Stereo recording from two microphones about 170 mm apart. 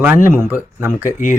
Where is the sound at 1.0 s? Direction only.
50° left (ahead or behind).